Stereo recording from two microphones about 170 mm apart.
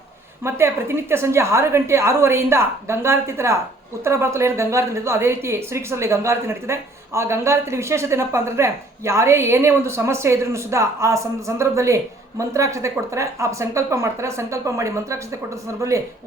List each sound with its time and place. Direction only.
0.4 s a woman's voice: 15° right (ahead or behind)